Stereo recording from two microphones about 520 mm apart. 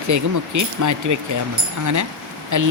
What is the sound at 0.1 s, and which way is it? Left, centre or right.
Speech, right.